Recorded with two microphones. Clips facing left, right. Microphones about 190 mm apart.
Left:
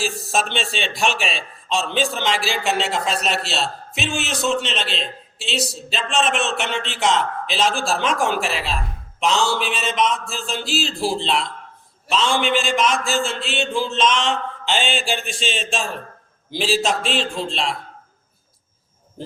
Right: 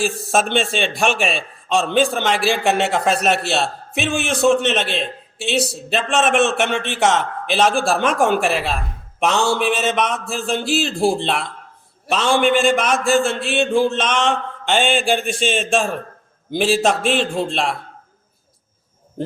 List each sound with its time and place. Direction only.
0.0 s a man's voice: 55° right (ahead or behind)